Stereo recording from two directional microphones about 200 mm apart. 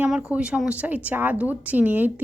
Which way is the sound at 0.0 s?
5° right (ahead or behind).